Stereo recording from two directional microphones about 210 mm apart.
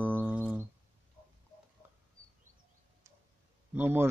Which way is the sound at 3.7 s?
10° right (ahead or behind).